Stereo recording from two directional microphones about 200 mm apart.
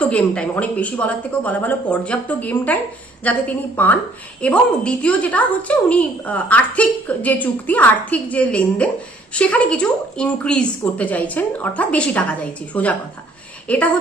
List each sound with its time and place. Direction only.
0.0 s a woman's voice: 5° left (ahead or behind)